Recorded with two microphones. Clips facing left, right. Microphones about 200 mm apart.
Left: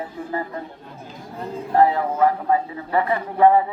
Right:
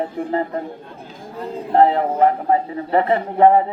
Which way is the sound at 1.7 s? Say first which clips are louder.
Right 3 dB; 25° right (ahead or behind).